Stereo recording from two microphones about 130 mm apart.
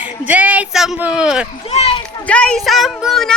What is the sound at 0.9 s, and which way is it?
Speech, 10° right (ahead or behind).